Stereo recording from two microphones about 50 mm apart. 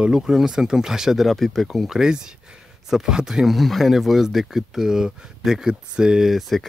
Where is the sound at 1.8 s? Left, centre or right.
Centre.